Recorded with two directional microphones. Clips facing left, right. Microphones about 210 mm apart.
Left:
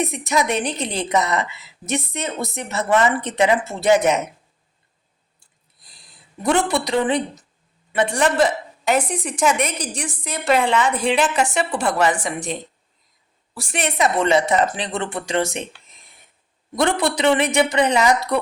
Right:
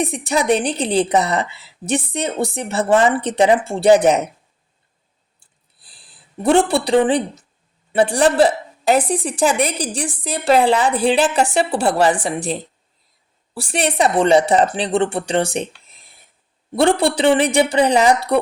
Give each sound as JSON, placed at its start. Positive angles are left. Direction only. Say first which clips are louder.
{"t": 0.0, "sound": "a woman's voice", "louder": "right 2 dB", "side_deg": -30}
{"t": 5.8, "sound": "a woman's voice", "louder": "even", "side_deg": -30}
{"t": 16.7, "sound": "a woman's voice", "louder": "right 4 dB", "side_deg": -30}